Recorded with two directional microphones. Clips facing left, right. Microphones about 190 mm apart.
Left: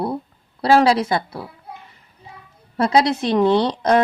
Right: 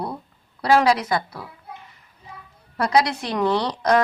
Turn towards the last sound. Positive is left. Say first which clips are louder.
# left 3 dB
turn(degrees=25)  # may be behind; listen again after turning